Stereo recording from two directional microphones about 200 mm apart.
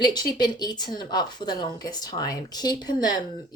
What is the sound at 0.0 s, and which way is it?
A woman's voice, 20° left (ahead or behind).